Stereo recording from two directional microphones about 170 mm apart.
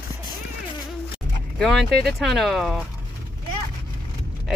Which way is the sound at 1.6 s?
Centre (ahead or behind).